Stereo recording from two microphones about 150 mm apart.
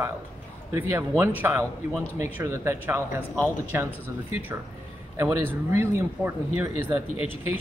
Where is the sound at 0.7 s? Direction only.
15° right (ahead or behind).